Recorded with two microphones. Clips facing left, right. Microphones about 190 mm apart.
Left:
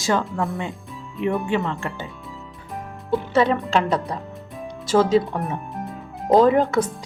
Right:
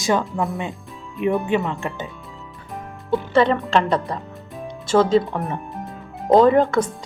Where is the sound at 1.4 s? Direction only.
15° right (ahead or behind).